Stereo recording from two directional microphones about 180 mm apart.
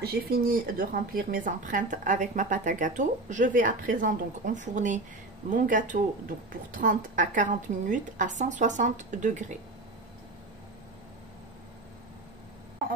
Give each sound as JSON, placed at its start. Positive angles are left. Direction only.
{"t": 0.0, "sound": "a woman's voice", "side_deg": -55}